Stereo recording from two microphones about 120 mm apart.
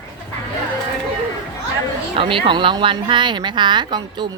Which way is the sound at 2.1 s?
45° right (ahead or behind).